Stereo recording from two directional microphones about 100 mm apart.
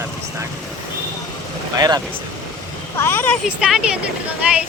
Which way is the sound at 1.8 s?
40° right (ahead or behind).